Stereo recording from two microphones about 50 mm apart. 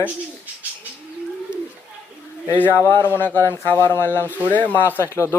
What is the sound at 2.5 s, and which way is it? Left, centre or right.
Speech, left.